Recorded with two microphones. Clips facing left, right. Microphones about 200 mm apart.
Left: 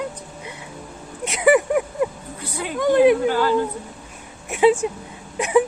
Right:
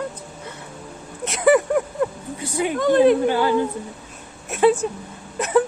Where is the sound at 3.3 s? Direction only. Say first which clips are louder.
Even; 15° right (ahead or behind).